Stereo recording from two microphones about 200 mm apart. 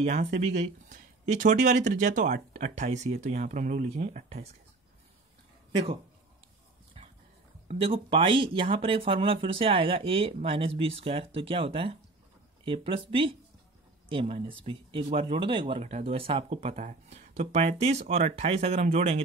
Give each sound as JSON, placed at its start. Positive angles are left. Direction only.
{"t": 0.0, "sound": "speech", "side_deg": -35}
{"t": 7.0, "sound": "dog", "side_deg": -30}
{"t": 7.6, "sound": "speech", "side_deg": -25}